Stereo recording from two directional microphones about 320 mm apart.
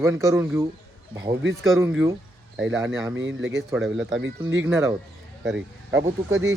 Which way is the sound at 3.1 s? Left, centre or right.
Right.